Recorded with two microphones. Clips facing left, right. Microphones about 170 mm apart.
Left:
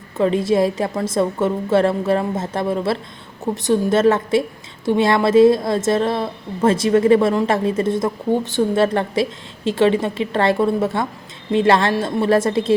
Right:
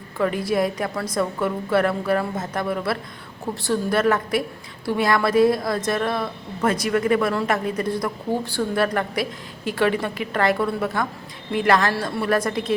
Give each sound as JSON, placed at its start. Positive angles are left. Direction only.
{"t": 0.2, "sound": "a woman's voice", "side_deg": 25}